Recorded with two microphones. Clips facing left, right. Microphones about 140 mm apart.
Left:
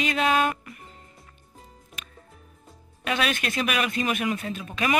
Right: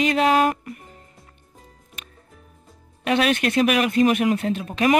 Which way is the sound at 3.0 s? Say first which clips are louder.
Right 7 dB; 55° right (ahead or behind).